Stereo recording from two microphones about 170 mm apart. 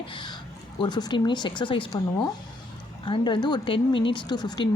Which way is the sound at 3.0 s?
30° left (ahead or behind).